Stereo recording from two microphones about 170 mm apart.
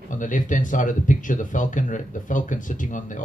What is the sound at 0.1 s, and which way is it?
Speech, 50° left (ahead or behind).